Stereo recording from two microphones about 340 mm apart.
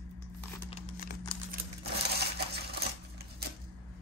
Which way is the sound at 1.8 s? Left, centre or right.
Right.